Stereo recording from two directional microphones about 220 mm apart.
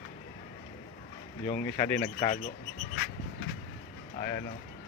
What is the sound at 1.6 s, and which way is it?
Speech, 15° left (ahead or behind).